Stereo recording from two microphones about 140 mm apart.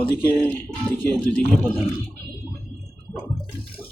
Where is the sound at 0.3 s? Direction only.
15° left (ahead or behind).